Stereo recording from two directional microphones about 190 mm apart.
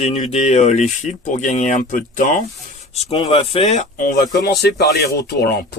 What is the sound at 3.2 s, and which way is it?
Speech, 25° left (ahead or behind).